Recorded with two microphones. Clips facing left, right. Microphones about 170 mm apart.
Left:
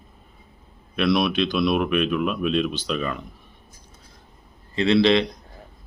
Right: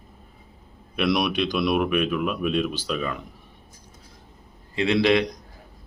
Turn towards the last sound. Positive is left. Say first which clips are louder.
# left 2 dB
turn(degrees=-10)  # may be behind; listen again after turning